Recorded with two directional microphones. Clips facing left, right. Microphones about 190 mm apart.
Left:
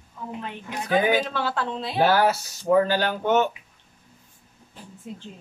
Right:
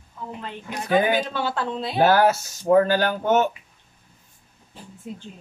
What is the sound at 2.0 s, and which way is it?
Speech, 50° right (ahead or behind).